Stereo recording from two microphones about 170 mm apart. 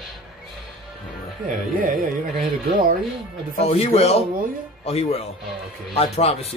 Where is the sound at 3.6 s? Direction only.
35° left (ahead or behind).